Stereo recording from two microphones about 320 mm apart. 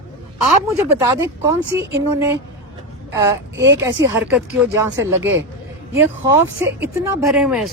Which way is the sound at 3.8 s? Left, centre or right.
Centre.